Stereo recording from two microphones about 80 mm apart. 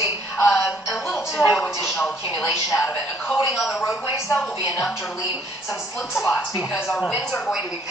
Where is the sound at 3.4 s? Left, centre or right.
Centre.